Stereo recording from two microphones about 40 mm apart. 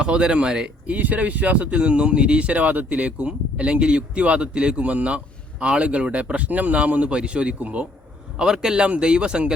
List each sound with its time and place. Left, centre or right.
0.0 s speech: right
0.9 s speech: right
1.8 s speech: right
4.8 s speech: right
8.4 s speech: centre